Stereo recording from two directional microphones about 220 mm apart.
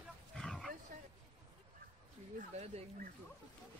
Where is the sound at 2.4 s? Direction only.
35° right (ahead or behind).